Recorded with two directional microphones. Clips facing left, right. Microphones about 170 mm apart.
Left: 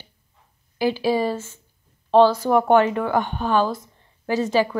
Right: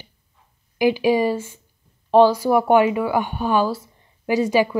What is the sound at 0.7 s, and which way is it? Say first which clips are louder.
A woman's voice: right 3 dB; 15° right (ahead or behind).